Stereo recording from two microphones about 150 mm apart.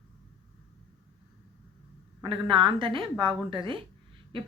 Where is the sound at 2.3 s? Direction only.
35° right (ahead or behind).